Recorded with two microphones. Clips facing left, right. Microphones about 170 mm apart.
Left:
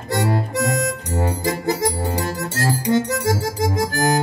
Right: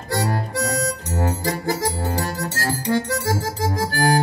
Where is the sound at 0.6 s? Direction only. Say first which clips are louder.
Left 1 dB; 50° left (ahead or behind).